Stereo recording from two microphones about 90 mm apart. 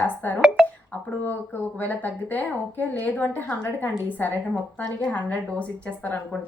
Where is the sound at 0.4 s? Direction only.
5° right (ahead or behind).